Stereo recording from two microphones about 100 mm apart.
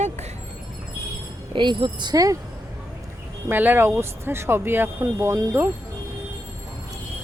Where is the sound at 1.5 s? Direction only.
50° right (ahead or behind); by 2.4 s 35° right (ahead or behind).